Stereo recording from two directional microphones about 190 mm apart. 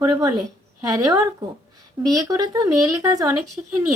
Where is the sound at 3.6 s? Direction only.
5° right (ahead or behind).